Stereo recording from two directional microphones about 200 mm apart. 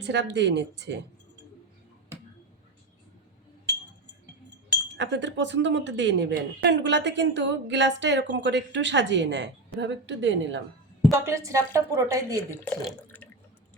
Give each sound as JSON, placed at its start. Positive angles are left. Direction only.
{"t": 0.0, "sound": "speech", "side_deg": -60}
{"t": 4.9, "sound": "speech", "side_deg": -60}
{"t": 11.1, "sound": "a woman's voice", "side_deg": -15}
{"t": 12.8, "sound": "water", "side_deg": 10}